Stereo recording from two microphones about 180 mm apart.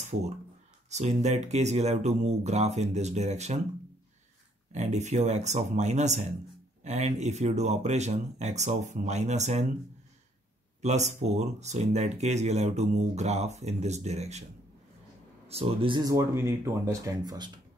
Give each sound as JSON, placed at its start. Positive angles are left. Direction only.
{"t": 0.8, "sound": "speech", "side_deg": -40}
{"t": 4.7, "sound": "speech", "side_deg": -40}
{"t": 10.8, "sound": "speech", "side_deg": -40}
{"t": 15.4, "sound": "speech", "side_deg": -35}